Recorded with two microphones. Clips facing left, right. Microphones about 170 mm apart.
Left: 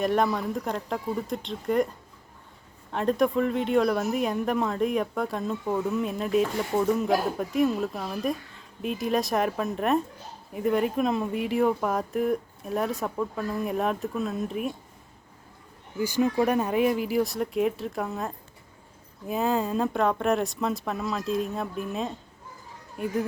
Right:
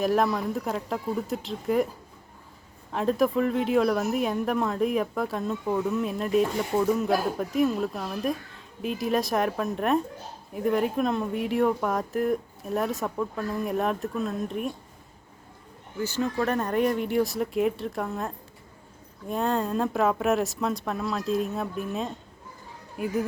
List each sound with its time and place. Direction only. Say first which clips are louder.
0.0 s a woman's voice: right 1 dB; centre (ahead or behind)
16.0 s a woman's voice: left 3 dB; 10° left (ahead or behind); by 23.1 s 5° right (ahead or behind)